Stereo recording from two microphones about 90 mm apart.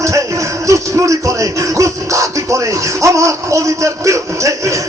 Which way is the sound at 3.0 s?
35° right (ahead or behind).